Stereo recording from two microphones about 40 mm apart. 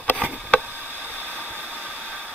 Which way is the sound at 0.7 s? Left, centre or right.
Right.